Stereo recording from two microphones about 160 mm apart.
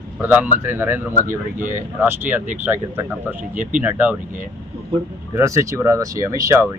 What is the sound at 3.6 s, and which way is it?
Speech, 10° right (ahead or behind).